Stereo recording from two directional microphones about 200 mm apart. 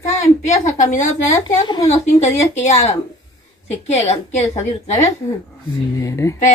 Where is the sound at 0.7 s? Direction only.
40° left (ahead or behind).